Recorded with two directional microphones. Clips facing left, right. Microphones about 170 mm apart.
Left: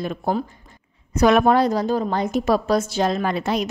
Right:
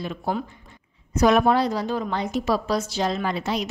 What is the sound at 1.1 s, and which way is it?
A woman's voice, 65° left (ahead or behind).